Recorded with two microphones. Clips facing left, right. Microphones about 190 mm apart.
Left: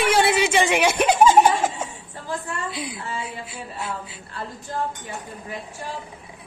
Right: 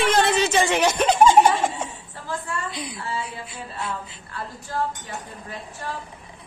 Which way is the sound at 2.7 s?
5° left (ahead or behind).